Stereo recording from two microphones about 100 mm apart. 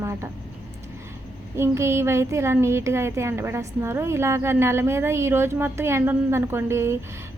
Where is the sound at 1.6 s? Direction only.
25° right (ahead or behind).